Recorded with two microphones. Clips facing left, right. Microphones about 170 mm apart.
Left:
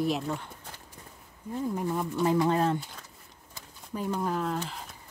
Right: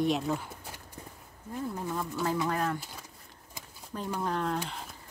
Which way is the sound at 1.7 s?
15° left (ahead or behind).